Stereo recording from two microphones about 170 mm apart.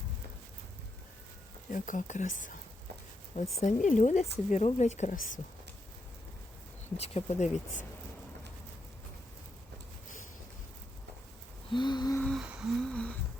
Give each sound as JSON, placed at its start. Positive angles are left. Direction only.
{"t": 1.7, "sound": "speech", "side_deg": 50}
{"t": 3.6, "sound": "speech", "side_deg": 45}
{"t": 6.9, "sound": "speech", "side_deg": 35}
{"t": 11.7, "sound": "gasp", "side_deg": 25}
{"t": 12.1, "sound": "a sound", "side_deg": 5}
{"t": 12.4, "sound": "a sound", "side_deg": -5}